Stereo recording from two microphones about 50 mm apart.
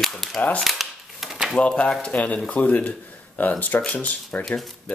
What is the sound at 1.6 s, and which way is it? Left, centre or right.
Speech, left.